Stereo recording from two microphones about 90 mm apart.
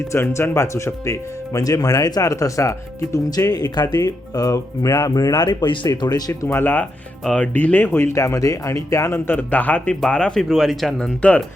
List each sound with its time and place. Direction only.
0.1 s speech: 30° left (ahead or behind)
5.4 s speech: 50° left (ahead or behind)
6.5 s speech: 20° left (ahead or behind)